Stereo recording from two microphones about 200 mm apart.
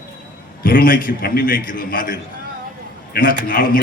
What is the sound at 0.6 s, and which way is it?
A man's voice, 45° left (ahead or behind).